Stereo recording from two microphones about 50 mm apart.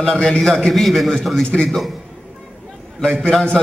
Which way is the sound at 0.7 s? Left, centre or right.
Centre.